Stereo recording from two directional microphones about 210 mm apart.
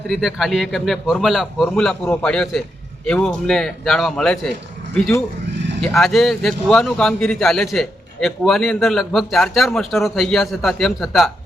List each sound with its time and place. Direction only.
0.1 s a man's voice: centre (ahead or behind)
5.8 s a man's voice: centre (ahead or behind)